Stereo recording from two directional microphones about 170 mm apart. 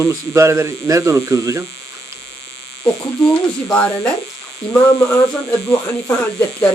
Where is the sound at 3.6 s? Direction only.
10° left (ahead or behind).